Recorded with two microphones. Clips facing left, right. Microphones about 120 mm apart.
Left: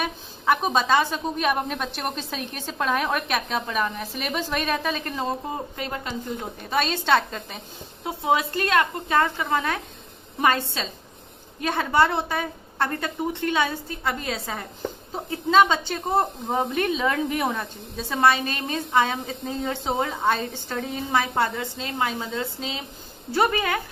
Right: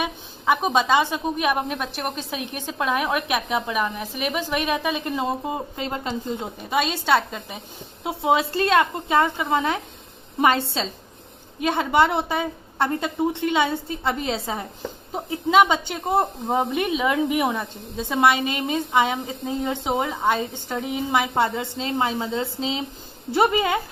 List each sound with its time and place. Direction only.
0.0 s a sound: 15° right (ahead or behind)
1.1 s a woman's voice: 10° right (ahead or behind)
6.6 s speech: 10° right (ahead or behind)
8.0 s a woman's voice: 25° right (ahead or behind)